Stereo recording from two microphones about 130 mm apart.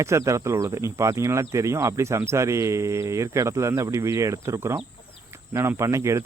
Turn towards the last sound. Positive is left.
turn(degrees=-20)  # may be behind; listen again after turning